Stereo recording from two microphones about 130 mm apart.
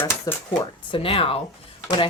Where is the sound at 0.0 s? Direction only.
20° left (ahead or behind).